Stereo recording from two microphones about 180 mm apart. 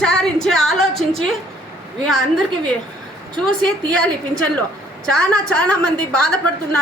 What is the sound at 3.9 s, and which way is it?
A woman's voice, 5° left (ahead or behind).